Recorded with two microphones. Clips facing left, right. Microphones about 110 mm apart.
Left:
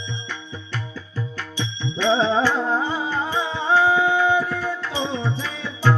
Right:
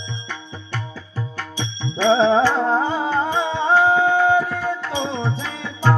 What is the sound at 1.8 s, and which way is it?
Music, 30° right (ahead or behind).